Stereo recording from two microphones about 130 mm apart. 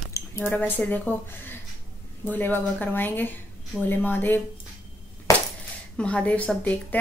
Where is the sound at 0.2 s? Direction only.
25° left (ahead or behind).